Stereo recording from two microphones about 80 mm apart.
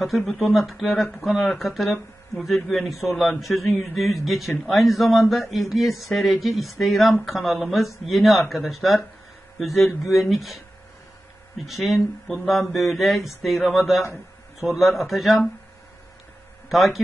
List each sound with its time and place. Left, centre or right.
0.0 s speech: centre
10.0 s speech: centre
11.6 s speech: centre
16.6 s speech: centre